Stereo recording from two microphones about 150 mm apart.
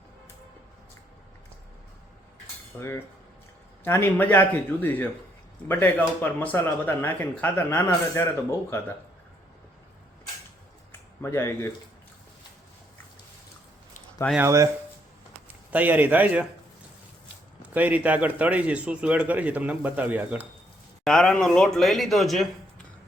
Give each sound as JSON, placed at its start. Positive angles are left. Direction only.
{"t": 2.7, "sound": "speech", "side_deg": 15}
{"t": 11.2, "sound": "speech", "side_deg": 20}
{"t": 14.3, "sound": "speech", "side_deg": -20}
{"t": 15.7, "sound": "a man's voice", "side_deg": -10}
{"t": 17.7, "sound": "a man's voice", "side_deg": -10}
{"t": 21.0, "sound": "speech", "side_deg": 5}